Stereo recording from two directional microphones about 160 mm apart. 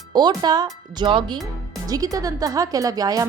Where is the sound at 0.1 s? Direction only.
25° right (ahead or behind).